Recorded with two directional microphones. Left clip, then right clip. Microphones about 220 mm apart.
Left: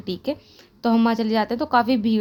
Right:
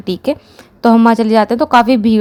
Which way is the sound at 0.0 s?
30° right (ahead or behind).